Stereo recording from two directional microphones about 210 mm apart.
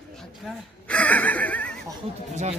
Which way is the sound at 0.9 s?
5° left (ahead or behind).